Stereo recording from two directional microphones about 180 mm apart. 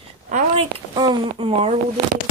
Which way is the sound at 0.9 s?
25° right (ahead or behind).